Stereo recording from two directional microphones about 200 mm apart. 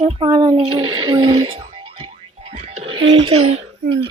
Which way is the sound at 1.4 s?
35° right (ahead or behind).